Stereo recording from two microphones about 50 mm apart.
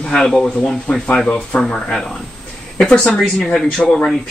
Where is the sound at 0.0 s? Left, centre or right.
Centre.